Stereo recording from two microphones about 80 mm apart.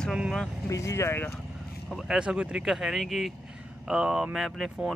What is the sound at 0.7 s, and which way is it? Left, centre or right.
Speech, left.